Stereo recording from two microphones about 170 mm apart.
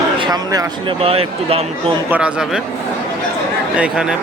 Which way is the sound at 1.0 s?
35° right (ahead or behind).